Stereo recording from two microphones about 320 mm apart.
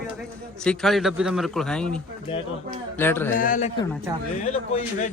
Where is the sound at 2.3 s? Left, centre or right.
Centre.